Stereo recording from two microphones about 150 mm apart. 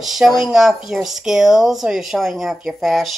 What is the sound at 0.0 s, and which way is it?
Speech, centre (ahead or behind).